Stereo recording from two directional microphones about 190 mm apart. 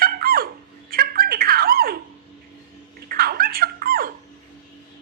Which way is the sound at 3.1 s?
50° right (ahead or behind).